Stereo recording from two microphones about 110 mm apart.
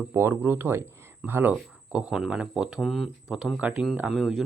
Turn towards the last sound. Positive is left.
turn(degrees=0)  # may be behind; listen again after turning